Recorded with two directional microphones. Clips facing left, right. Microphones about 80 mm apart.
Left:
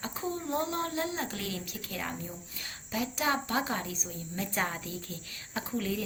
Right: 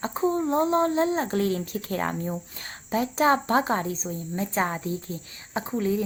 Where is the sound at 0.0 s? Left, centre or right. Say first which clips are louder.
Right 11 dB; right.